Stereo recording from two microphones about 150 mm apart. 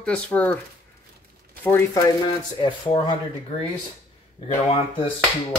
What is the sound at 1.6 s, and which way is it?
Speech, 15° left (ahead or behind).